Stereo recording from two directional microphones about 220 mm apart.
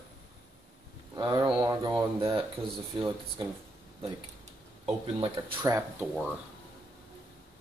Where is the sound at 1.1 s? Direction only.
20° right (ahead or behind).